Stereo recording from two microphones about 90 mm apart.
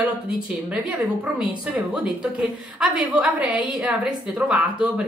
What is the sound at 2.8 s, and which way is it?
A woman's voice, 15° right (ahead or behind).